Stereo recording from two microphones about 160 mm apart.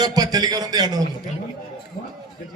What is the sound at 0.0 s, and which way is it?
A man's voice, 25° right (ahead or behind).